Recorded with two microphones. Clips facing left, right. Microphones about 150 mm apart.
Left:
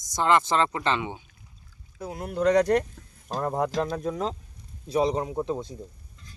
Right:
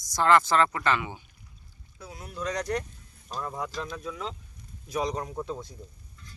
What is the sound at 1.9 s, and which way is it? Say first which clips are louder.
Speech: left 9 dB; 55° left (ahead or behind).